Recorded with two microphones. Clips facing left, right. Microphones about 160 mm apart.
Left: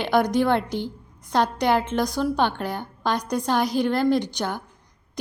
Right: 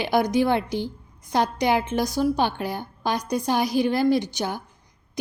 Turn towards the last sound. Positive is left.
turn(degrees=-10)  # may be behind; listen again after turning